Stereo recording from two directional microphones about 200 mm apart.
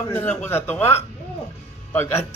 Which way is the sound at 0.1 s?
10° left (ahead or behind).